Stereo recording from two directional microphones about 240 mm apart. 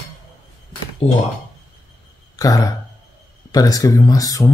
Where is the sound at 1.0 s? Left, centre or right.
Left.